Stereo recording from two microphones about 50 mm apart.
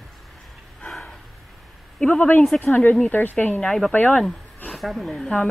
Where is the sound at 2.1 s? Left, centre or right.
Left.